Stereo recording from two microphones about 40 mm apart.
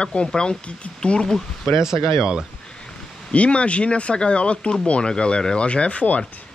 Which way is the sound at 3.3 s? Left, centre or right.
Left.